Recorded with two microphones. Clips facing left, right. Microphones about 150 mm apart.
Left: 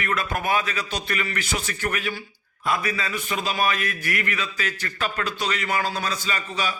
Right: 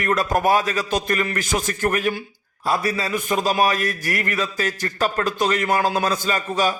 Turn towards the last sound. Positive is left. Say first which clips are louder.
# right 7 dB
turn(degrees=-45)  # may be behind; listen again after turning